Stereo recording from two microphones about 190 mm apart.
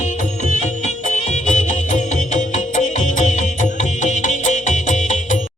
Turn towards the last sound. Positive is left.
turn(degrees=40)  # may be behind; listen again after turning